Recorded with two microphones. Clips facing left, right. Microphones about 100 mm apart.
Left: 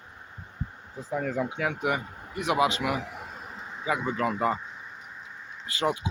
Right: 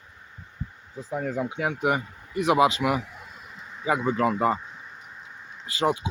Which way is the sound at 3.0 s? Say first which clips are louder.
Left 5 dB; 65° left (ahead or behind).